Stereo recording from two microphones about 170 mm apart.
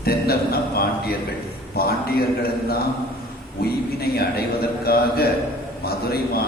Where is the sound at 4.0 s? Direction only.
65° left (ahead or behind).